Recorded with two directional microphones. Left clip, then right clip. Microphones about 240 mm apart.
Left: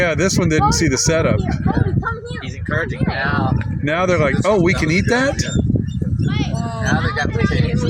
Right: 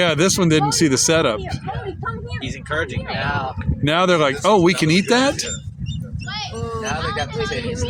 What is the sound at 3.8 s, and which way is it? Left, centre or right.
Speech, centre.